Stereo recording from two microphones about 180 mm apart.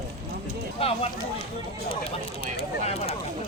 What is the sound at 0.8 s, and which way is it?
Speech, 30° left (ahead or behind).